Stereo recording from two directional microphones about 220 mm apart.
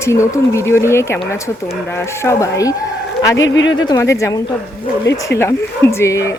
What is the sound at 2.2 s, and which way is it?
Speech, 15° left (ahead or behind).